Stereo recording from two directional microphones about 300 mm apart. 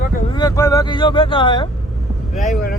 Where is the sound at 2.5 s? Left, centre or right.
Left.